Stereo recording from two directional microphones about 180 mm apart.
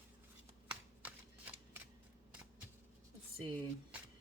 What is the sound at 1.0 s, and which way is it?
Shuffling cards, 10° right (ahead or behind).